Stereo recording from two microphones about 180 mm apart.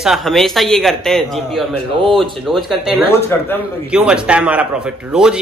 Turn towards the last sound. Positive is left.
turn(degrees=-5)  # may be behind; listen again after turning